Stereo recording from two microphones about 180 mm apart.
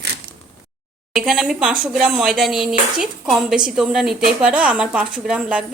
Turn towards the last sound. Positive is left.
turn(degrees=-5)  # may be behind; listen again after turning